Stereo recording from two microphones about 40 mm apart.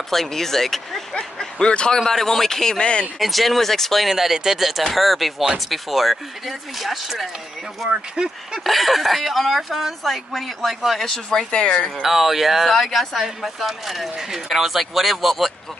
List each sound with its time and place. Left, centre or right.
0.1 s speech: centre
1.1 s speech: left
2.0 s speech: centre
2.8 s speech: left
3.2 s speech: centre
4.1 s speech: centre
8.2 s speech: centre
8.6 s speech: centre
11.0 s speech: centre
12.0 s speech: centre
12.7 s speech: centre